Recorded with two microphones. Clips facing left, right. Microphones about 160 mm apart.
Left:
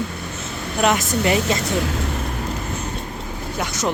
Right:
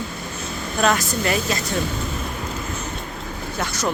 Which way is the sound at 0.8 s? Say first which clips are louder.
Left 2 dB; 20° left (ahead or behind).